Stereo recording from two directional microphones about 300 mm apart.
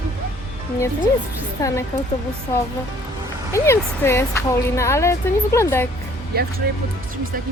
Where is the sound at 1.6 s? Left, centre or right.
Centre.